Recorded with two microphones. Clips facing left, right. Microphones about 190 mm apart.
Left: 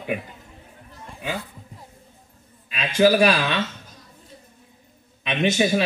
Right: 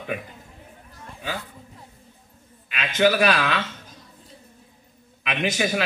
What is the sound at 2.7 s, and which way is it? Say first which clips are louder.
Speech: left 3 dB; 30° left (ahead or behind).